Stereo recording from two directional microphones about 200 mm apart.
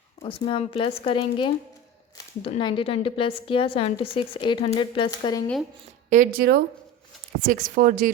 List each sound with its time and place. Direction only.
0.2 s a woman's voice: 25° left (ahead or behind)
6.1 s speech: 45° right (ahead or behind)